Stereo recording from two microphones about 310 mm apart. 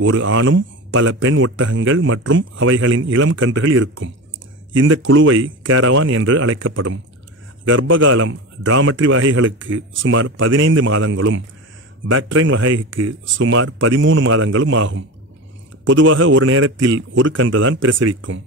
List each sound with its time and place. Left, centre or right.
0.0 s a man's voice: right